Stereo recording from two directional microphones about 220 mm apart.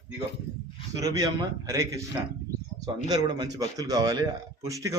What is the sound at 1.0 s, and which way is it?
Speech, 15° right (ahead or behind).